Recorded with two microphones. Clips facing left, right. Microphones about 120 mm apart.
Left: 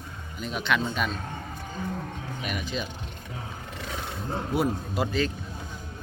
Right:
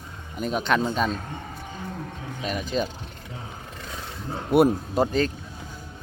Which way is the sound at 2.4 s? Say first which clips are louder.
Right 6 dB; 35° right (ahead or behind).